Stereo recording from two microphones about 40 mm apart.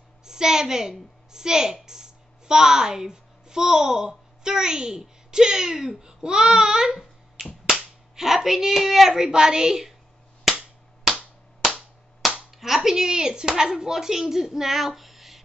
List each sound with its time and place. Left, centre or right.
0.2 s a woman's voice: centre
7.4 s finger snapping: centre
7.7 s a sound: centre
12.4 s speech: centre
14.3 s female singing: centre